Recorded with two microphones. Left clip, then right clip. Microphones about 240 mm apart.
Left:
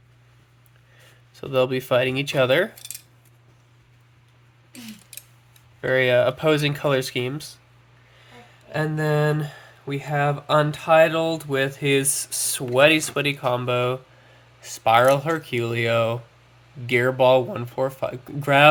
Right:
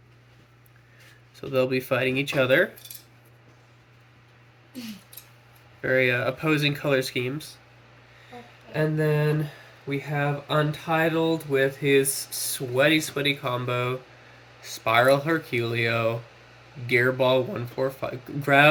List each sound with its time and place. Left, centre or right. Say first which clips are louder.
1.5 s speech: left 3 dB; left
5.8 s speech: left 4 dB; left
8.7 s speech: left 1 dB; left